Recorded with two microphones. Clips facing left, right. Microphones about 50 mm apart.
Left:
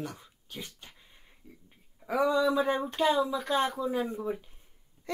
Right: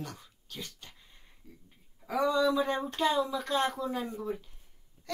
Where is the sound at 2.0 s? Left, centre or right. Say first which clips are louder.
Left 1 dB; centre.